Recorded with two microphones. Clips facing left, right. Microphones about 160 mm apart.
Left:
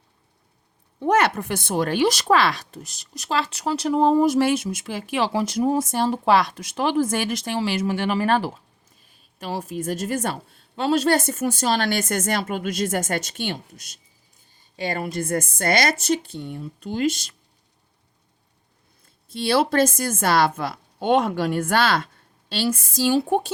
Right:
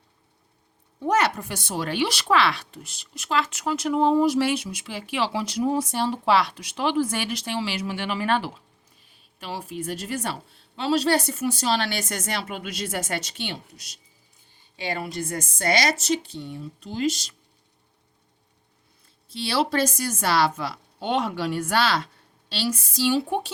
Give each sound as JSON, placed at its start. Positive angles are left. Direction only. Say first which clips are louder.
{"t": 1.0, "sound": "speech", "louder": "left 3 dB", "side_deg": 55}
{"t": 19.3, "sound": "speech", "louder": "left 4 dB", "side_deg": 50}